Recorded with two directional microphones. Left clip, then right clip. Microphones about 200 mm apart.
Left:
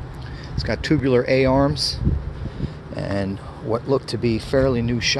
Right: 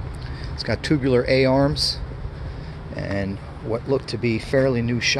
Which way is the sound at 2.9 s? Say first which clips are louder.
Left 1 dB; 15° left (ahead or behind).